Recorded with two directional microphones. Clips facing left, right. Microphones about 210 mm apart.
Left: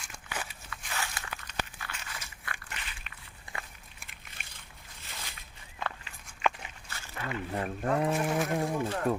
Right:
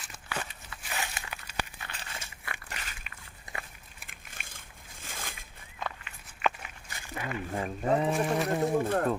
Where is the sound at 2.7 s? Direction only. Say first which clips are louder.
Right 1 dB; 40° right (ahead or behind).